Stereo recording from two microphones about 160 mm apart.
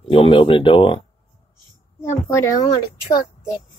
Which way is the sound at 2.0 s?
15° left (ahead or behind).